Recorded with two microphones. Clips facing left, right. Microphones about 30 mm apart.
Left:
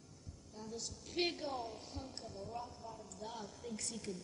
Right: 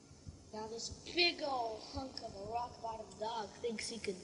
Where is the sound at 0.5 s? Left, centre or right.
Right.